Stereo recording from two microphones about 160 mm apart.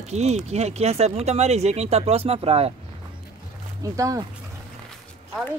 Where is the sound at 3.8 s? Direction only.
20° right (ahead or behind).